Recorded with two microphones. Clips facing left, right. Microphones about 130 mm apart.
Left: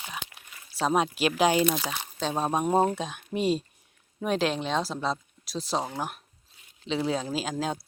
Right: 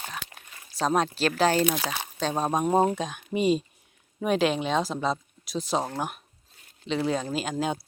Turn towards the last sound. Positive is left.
turn(degrees=0)  # may be behind; listen again after turning